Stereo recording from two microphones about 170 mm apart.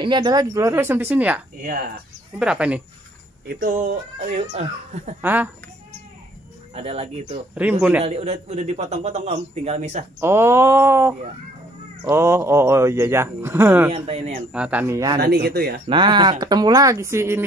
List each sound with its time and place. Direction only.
0.0 s speech: 25° right (ahead or behind); by 1.4 s 10° right (ahead or behind)
1.6 s speech: 60° right (ahead or behind)
2.3 s speech: 5° right (ahead or behind)
3.4 s speech: 60° right (ahead or behind); by 5.1 s 40° right (ahead or behind)
5.2 s speech: 10° right (ahead or behind)
6.7 s a man's voice: 35° right (ahead or behind)
7.6 s speech: 10° right (ahead or behind)
8.0 s a man's voice: 40° right (ahead or behind)
10.2 s speech: 15° right (ahead or behind)
13.9 s a man's voice: 40° right (ahead or behind)
14.5 s speech: 10° right (ahead or behind)
15.1 s speech: 70° right (ahead or behind)
15.9 s speech: 25° right (ahead or behind)